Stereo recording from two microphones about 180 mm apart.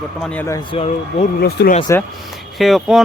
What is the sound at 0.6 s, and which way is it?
Speech, 30° left (ahead or behind).